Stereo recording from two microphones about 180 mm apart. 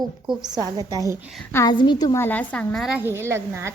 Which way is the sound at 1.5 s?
15° left (ahead or behind).